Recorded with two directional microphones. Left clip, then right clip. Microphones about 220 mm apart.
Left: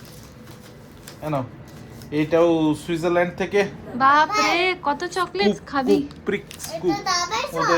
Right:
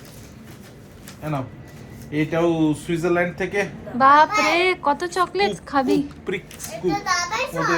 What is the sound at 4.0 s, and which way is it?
A child's voice, 10° left (ahead or behind).